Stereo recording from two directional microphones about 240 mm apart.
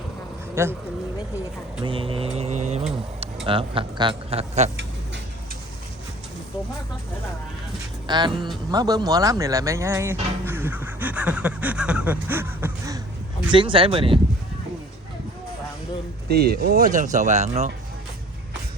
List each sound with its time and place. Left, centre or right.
0.5 s speech: centre
1.8 s speech: right
8.0 s speech: centre
16.3 s speech: right